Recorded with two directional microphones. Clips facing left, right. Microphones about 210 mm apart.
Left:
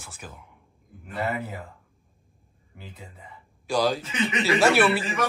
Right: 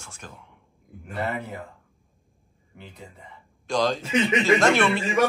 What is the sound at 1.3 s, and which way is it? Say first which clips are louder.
Speech: even; 5° left (ahead or behind).